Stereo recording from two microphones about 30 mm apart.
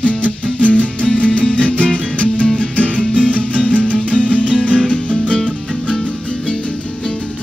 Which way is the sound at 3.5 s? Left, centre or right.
Right.